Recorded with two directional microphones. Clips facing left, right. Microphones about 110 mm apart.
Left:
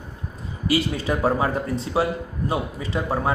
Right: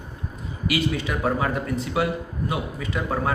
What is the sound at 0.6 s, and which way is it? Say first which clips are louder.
A man's voice: left 2 dB; 35° left (ahead or behind).